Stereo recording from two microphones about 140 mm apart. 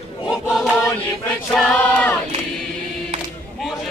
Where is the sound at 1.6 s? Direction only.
10° left (ahead or behind).